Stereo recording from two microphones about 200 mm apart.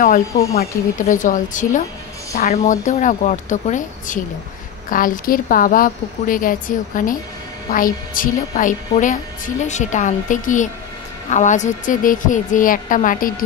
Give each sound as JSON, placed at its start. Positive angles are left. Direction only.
{"t": 0.6, "sound": "a woman's voice", "side_deg": 40}